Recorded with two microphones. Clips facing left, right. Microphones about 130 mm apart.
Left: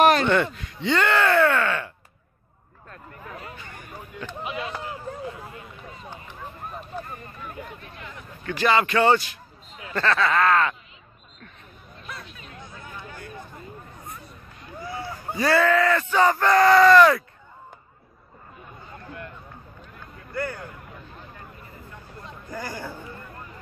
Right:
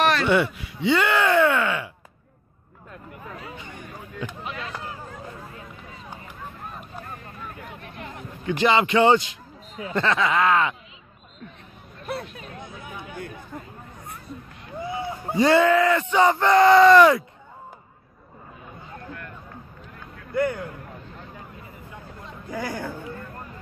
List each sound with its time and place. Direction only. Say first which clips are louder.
0.3 s speech: right 1 dB; 10° right (ahead or behind)
2.9 s speech: right 1 dB; 15° right (ahead or behind)
7.8 s speech: right 3 dB; 50° right (ahead or behind)
8.5 s speech: right 1 dB; 20° right (ahead or behind)
12.1 s speech: right 9 dB; 60° right (ahead or behind)
12.8 s a sound: right 1 dB; 15° right (ahead or behind)
14.8 s speech: right 4 dB; 20° right (ahead or behind)
20.3 s speech: right 6 dB; 20° right (ahead or behind)
22.2 s speech: right 4 dB; centre (ahead or behind)